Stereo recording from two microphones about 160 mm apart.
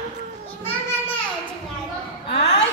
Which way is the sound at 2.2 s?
90° left.